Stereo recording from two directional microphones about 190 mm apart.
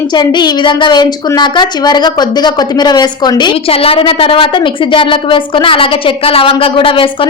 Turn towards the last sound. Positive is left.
turn(degrees=30)  # may be behind; listen again after turning